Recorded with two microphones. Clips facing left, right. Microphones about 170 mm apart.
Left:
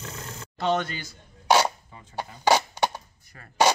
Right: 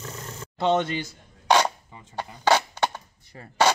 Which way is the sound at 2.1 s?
10° left (ahead or behind).